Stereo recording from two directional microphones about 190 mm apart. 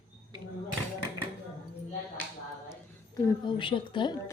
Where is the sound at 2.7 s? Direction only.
20° left (ahead or behind).